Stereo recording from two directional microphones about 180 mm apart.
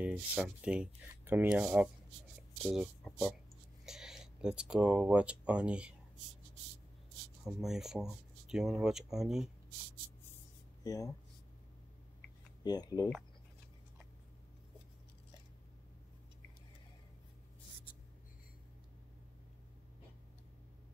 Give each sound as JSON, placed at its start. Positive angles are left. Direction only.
{"t": 0.0, "sound": "speech", "side_deg": -5}
{"t": 7.4, "sound": "speech", "side_deg": 0}
{"t": 10.8, "sound": "speech", "side_deg": 20}
{"t": 12.6, "sound": "speech", "side_deg": 20}